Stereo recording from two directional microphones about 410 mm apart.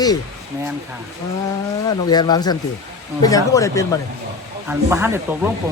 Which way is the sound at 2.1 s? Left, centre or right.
Centre.